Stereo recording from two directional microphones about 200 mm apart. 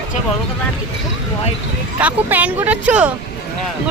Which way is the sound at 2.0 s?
10° right (ahead or behind).